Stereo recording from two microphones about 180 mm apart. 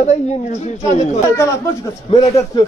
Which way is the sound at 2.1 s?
35° left (ahead or behind).